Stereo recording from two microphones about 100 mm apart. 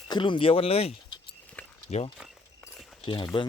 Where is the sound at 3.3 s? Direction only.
60° left (ahead or behind).